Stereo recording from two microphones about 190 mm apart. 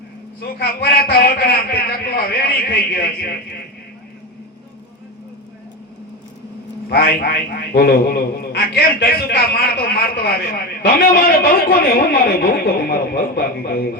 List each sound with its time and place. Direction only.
0.6 s a man's voice: 55° left (ahead or behind)
6.9 s a man's voice: 55° left (ahead or behind)